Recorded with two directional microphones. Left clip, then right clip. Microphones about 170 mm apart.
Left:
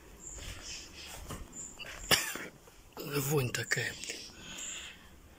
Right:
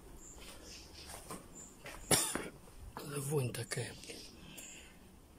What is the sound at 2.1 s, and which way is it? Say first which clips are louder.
Cough: left 5 dB; 25° right (ahead or behind).